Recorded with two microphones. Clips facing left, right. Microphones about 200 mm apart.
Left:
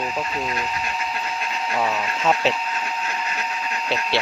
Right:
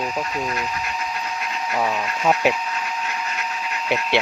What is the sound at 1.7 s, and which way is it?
Speech, 10° right (ahead or behind).